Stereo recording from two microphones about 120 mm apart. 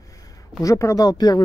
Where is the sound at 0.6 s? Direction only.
25° left (ahead or behind).